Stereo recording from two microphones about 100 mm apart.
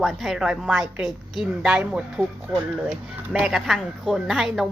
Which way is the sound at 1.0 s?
5° right (ahead or behind).